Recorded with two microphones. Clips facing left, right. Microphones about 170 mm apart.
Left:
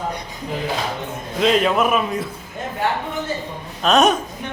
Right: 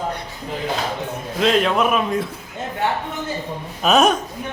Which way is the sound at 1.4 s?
Centre (ahead or behind).